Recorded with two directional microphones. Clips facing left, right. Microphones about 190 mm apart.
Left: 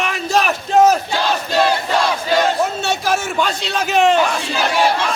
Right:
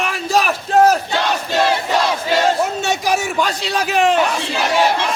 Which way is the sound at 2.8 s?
15° right (ahead or behind).